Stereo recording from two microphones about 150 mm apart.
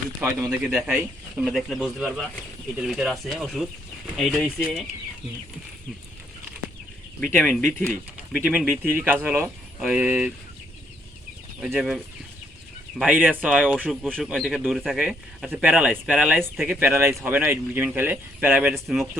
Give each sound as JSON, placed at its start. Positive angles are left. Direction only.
{"t": 0.2, "sound": "speech", "side_deg": -15}
{"t": 7.3, "sound": "speech", "side_deg": 5}
{"t": 8.3, "sound": "speech", "side_deg": -10}
{"t": 11.6, "sound": "speech", "side_deg": 0}
{"t": 13.1, "sound": "speech", "side_deg": -10}
{"t": 14.3, "sound": "speech", "side_deg": 0}
{"t": 16.6, "sound": "speech", "side_deg": -15}